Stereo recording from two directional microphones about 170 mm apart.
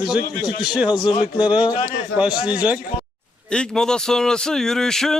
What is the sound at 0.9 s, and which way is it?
Speech, 25° left (ahead or behind).